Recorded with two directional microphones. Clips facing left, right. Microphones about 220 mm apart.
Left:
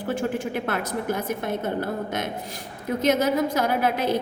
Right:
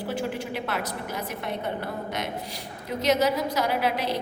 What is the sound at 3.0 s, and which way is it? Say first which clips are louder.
A woman's voice: left 2 dB; 50° left (ahead or behind).